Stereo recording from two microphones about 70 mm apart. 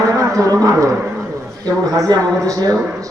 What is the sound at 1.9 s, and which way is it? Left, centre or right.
Speech, right.